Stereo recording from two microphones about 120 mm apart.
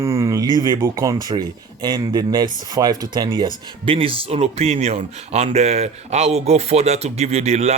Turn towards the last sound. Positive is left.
turn(degrees=-65)  # may be behind; listen again after turning